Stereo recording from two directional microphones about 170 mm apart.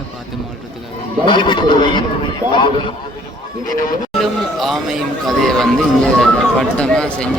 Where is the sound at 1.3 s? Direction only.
30° left (ahead or behind).